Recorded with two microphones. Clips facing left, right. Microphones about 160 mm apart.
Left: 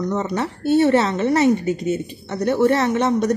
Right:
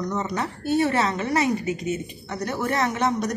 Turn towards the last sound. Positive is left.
turn(degrees=30)  # may be behind; listen again after turning